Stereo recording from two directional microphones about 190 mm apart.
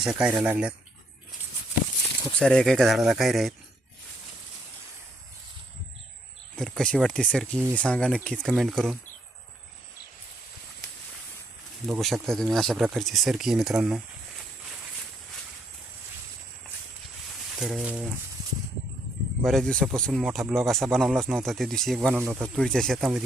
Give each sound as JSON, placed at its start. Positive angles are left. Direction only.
{"t": 0.0, "sound": "speech", "side_deg": -5}
{"t": 2.4, "sound": "speech", "side_deg": 5}
{"t": 6.6, "sound": "speech", "side_deg": 5}
{"t": 11.9, "sound": "speech", "side_deg": 0}
{"t": 17.6, "sound": "speech", "side_deg": 0}
{"t": 19.4, "sound": "speech", "side_deg": 0}
{"t": 22.5, "sound": "speech", "side_deg": 5}